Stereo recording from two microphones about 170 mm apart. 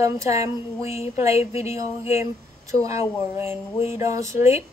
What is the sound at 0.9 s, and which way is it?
Speech, 35° left (ahead or behind).